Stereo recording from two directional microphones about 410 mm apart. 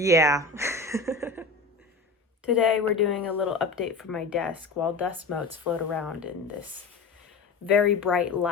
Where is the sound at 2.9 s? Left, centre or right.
Centre.